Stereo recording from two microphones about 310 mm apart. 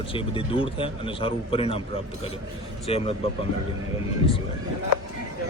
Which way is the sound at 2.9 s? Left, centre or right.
Centre.